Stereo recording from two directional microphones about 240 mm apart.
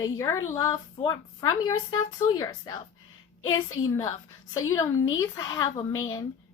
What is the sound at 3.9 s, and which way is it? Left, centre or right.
A child's voice, centre.